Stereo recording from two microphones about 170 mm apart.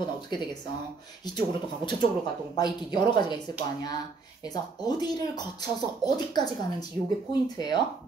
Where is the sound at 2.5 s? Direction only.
25° left (ahead or behind).